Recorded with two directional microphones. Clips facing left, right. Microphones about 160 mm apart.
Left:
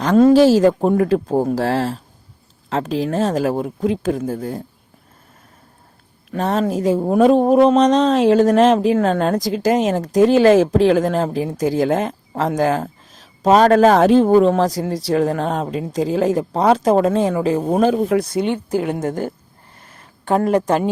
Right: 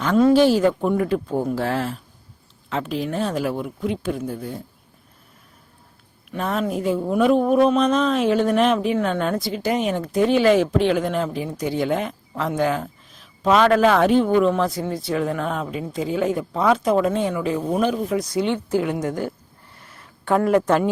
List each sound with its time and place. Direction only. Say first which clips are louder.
0.0 s a woman's voice: left 4 dB; 40° left (ahead or behind)
6.3 s speech: left 5 dB; 35° left (ahead or behind)
17.9 s a woman's voice: left 5 dB; 60° left (ahead or behind)
19.9 s a sound: left 2 dB; 40° left (ahead or behind)
20.3 s a woman's voice: left 1 dB; 30° left (ahead or behind)